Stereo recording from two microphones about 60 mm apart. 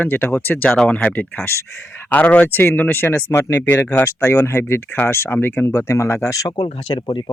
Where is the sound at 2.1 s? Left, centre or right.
Left.